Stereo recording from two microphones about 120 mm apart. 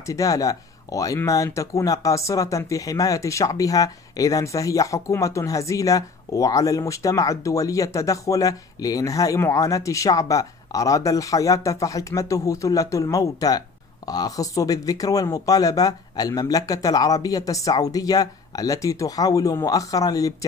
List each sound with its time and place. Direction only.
0.0 s speech: 30° left (ahead or behind)